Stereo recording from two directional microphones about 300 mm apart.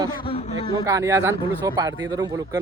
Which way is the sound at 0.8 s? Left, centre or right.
Centre.